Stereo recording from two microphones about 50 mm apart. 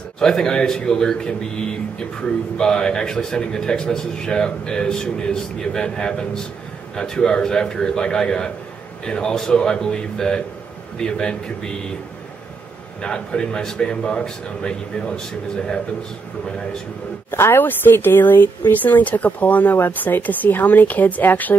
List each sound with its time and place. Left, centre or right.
0.2 s a man's voice: centre
13.0 s a man's voice: centre
17.3 s speech: left